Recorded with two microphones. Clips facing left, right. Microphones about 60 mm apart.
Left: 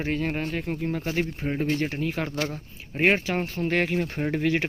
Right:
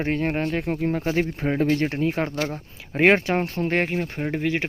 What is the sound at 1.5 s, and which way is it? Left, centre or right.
Speech, right.